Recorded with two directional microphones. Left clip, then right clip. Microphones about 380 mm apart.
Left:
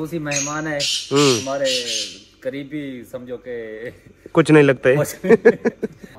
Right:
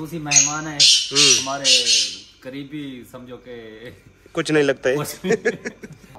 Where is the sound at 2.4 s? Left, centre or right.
Centre.